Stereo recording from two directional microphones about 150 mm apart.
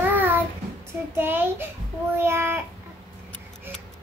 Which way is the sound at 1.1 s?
15° right (ahead or behind).